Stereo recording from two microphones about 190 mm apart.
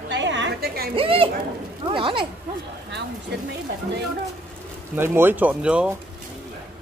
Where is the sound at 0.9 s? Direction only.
30° right (ahead or behind).